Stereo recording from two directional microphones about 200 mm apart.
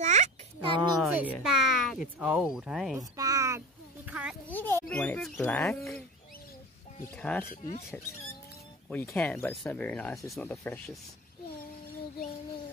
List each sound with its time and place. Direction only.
0.0 s a sound: 35° right (ahead or behind)
0.9 s speech: 5° right (ahead or behind)
3.0 s speech: 15° right (ahead or behind)
4.1 s a sound: 5° right (ahead or behind)
4.5 s speech: 10° left (ahead or behind)
7.2 s speech: 5° left (ahead or behind)
8.8 s speech: 5° left (ahead or behind)